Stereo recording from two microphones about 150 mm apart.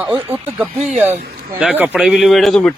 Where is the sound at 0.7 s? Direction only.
50° right (ahead or behind).